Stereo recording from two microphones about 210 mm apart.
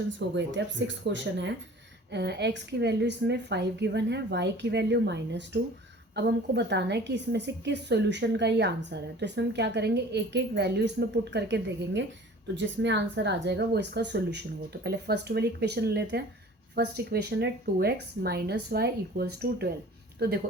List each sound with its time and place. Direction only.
0.3 s a woman's voice: 60° right (ahead or behind)